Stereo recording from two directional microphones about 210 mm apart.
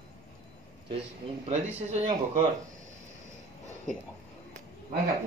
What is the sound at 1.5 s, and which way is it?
Speech, 30° right (ahead or behind).